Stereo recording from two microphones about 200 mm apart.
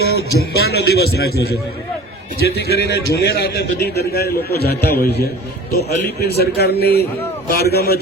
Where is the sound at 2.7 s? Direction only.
55° left (ahead or behind).